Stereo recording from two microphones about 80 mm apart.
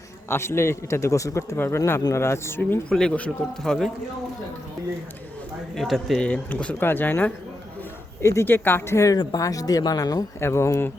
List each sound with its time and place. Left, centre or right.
0.3 s speech: left
2.9 s speech: centre
5.7 s speech: centre
6.2 s speech: centre
6.7 s speech: left
8.2 s speech: left
8.4 s speech: left
9.4 s speech: left
10.4 s speech: left